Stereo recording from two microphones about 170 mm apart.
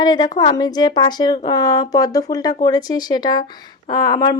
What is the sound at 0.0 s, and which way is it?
Speech, 25° left (ahead or behind).